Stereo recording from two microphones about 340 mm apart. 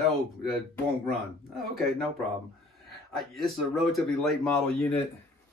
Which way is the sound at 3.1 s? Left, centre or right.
Centre.